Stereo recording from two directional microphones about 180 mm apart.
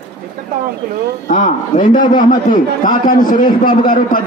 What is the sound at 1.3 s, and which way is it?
A man's voice, 50° left (ahead or behind).